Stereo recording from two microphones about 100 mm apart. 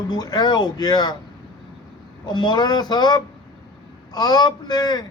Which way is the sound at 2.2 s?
50° left (ahead or behind).